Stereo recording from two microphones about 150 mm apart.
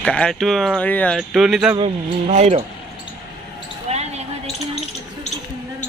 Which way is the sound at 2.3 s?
50° right (ahead or behind).